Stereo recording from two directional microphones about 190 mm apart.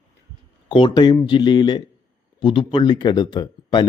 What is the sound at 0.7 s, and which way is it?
Speech, 25° left (ahead or behind).